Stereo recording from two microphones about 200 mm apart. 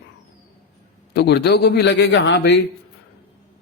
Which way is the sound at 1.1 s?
55° left (ahead or behind).